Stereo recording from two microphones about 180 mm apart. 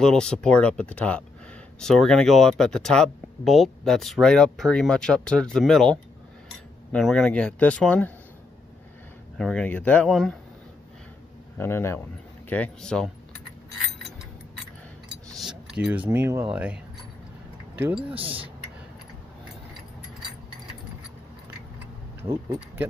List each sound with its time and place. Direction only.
0.0 s speech: 5° left (ahead or behind)
9.4 s speech: 5° left (ahead or behind)
11.5 s speech: 15° left (ahead or behind)
15.3 s keys jangling: 5° right (ahead or behind)
16.1 s speech: 15° right (ahead or behind)
18.1 s speech: 30° right (ahead or behind)
22.2 s speech: 15° right (ahead or behind)